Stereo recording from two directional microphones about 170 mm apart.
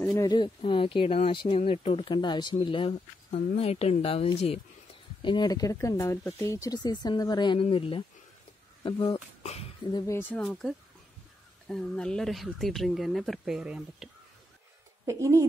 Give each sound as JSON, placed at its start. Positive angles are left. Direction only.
{"t": 0.0, "sound": "speech", "side_deg": 20}
{"t": 9.9, "sound": "speech", "side_deg": 15}
{"t": 15.0, "sound": "speech", "side_deg": -20}